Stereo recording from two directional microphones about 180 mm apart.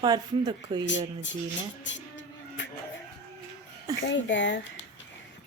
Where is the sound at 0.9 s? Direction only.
90° left.